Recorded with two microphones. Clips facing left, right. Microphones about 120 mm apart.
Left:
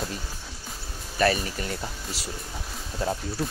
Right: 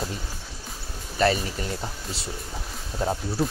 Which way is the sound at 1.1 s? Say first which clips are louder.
Right 1 dB; 20° right (ahead or behind).